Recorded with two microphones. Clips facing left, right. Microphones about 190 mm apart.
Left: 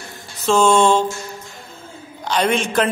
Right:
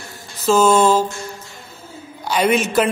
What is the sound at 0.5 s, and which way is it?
Speech, 5° right (ahead or behind).